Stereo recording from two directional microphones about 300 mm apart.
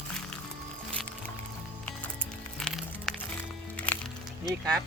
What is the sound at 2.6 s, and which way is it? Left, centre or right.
Music, centre.